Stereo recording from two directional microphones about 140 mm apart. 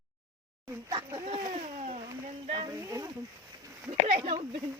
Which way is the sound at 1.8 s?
50° right (ahead or behind).